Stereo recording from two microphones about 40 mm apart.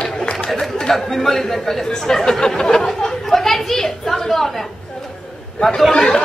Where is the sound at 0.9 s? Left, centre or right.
Centre.